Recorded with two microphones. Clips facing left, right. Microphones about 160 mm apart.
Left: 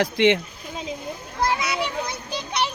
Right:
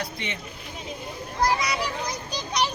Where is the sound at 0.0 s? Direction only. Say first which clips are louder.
Left 15 dB; 90° left.